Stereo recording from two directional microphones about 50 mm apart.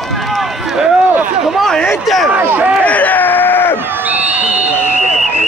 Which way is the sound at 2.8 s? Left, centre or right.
Left.